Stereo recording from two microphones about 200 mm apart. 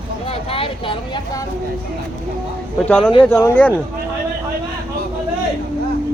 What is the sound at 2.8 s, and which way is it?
Speech, 5° left (ahead or behind).